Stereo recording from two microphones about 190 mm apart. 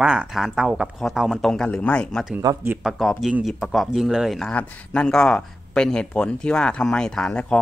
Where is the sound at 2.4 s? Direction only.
10° right (ahead or behind).